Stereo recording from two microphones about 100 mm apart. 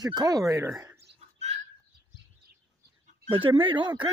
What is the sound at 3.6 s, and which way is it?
Speech, 55° right (ahead or behind).